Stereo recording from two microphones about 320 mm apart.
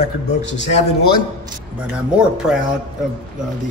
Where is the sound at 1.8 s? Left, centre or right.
Centre.